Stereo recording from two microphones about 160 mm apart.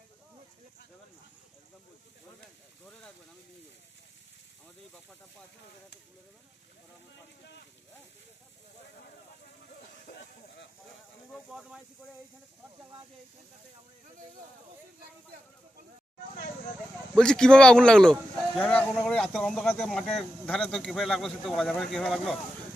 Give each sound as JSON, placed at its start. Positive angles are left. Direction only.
{"t": 7.4, "sound": "speech", "side_deg": 90}
{"t": 11.3, "sound": "speech", "side_deg": 0}
{"t": 17.2, "sound": "speech", "side_deg": 5}